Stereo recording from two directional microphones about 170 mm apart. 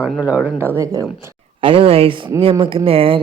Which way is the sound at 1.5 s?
30° right (ahead or behind).